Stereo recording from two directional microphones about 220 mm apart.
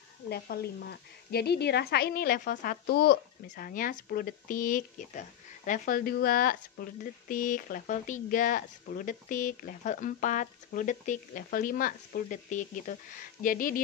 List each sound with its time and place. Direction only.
0.3 s a woman's voice: 45° left (ahead or behind)